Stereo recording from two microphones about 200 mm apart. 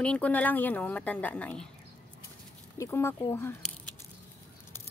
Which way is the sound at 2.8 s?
10° left (ahead or behind).